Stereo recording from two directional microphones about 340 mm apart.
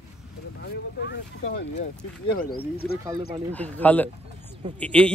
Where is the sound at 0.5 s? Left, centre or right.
Left.